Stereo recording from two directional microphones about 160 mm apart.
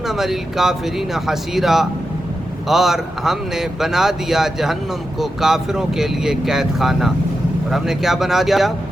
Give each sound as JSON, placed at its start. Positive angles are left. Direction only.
{"t": 0.1, "sound": "a man's voice", "side_deg": 0}